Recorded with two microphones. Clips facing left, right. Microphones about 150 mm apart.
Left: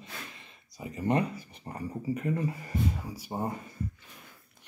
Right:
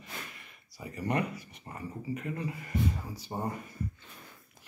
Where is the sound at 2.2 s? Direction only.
40° left (ahead or behind).